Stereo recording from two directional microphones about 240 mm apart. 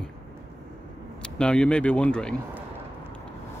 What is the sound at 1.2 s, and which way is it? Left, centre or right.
Speech, centre.